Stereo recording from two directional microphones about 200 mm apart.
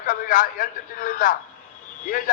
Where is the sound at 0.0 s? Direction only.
40° left (ahead or behind).